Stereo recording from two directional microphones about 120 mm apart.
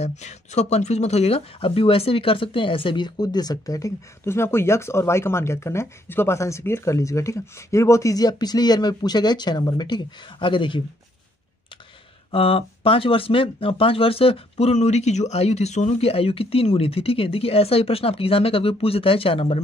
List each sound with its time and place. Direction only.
0.0 s speech: 70° left (ahead or behind); by 10.8 s 45° left (ahead or behind)
12.3 s speech: 50° left (ahead or behind)